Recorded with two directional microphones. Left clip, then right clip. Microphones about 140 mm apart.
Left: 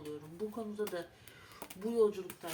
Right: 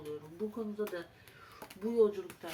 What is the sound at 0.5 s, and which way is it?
Speech, 30° left (ahead or behind).